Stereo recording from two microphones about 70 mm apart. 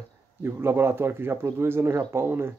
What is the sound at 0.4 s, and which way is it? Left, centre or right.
Speech, right.